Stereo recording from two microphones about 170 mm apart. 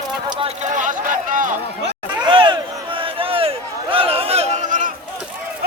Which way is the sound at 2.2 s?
30° right (ahead or behind).